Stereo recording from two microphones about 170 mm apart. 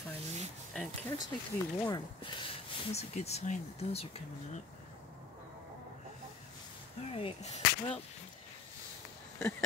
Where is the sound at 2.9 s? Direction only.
40° left (ahead or behind).